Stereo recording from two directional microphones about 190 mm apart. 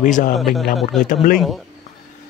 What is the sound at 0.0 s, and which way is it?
Speech, 45° left (ahead or behind).